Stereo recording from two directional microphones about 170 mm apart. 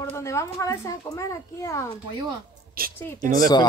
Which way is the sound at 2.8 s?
60° right (ahead or behind).